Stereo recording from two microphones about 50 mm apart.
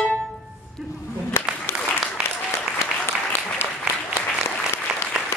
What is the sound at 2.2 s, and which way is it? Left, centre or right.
Applause, left.